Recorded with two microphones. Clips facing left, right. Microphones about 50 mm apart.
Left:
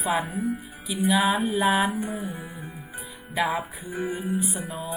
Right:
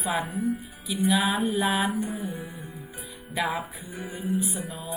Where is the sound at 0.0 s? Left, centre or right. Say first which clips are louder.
Left 2 dB; centre.